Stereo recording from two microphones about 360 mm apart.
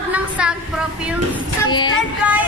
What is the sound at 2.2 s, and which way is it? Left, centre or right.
Speech, centre.